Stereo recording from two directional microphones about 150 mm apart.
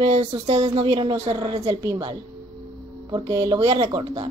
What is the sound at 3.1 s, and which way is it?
Speech, 35° right (ahead or behind).